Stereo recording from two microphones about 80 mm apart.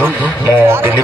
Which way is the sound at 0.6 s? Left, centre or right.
Right.